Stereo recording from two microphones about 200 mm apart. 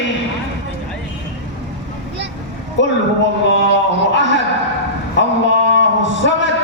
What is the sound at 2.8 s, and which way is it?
Speech, 65° left (ahead or behind).